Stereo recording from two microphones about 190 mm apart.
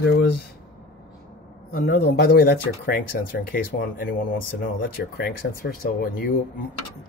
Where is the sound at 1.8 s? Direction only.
55° left (ahead or behind).